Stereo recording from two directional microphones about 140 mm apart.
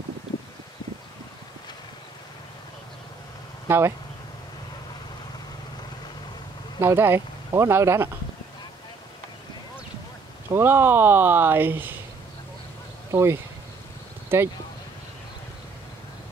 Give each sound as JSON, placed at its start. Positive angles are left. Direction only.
{"t": 3.6, "sound": "speech", "side_deg": -20}
{"t": 6.8, "sound": "speech", "side_deg": -15}
{"t": 10.5, "sound": "speech", "side_deg": -15}
{"t": 13.1, "sound": "speech", "side_deg": -20}